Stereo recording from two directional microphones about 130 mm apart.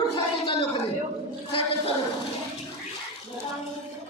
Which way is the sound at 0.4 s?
40° left (ahead or behind).